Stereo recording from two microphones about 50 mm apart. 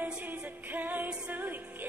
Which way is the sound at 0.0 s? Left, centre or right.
Right.